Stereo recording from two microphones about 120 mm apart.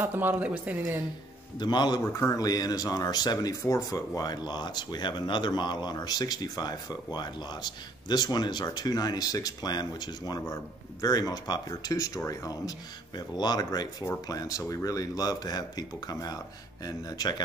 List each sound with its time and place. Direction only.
0.0 s speech: 15° right (ahead or behind)
1.6 s speech: 35° left (ahead or behind)